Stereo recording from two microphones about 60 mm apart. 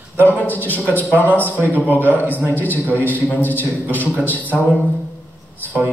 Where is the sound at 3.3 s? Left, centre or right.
Left.